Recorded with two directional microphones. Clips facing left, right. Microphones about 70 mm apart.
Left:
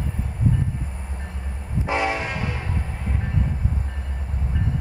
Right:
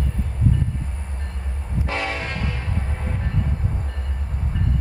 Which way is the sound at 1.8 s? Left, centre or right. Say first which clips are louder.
Left 3 dB; centre.